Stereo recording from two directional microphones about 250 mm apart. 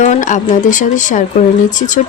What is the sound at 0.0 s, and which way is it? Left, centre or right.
Speech, left.